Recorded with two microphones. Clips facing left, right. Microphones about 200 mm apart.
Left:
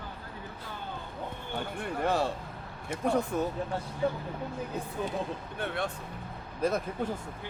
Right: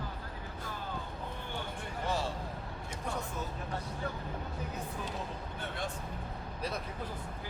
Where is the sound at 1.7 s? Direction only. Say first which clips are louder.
Left 8 dB; 60° left (ahead or behind).